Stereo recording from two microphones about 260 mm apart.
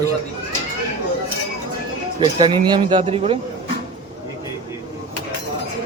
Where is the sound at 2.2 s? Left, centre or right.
Centre.